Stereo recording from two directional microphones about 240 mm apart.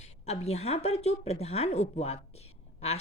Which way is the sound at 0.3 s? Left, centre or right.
Left.